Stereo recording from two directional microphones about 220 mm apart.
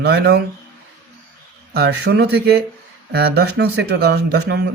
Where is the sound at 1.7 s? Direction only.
50° right (ahead or behind).